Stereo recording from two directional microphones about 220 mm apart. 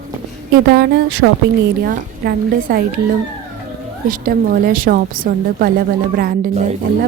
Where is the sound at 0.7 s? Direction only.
45° right (ahead or behind).